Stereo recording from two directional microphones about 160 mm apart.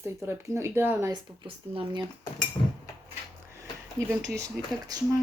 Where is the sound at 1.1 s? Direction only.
30° right (ahead or behind).